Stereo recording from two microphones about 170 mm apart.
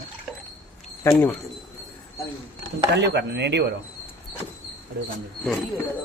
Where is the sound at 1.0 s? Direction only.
15° left (ahead or behind).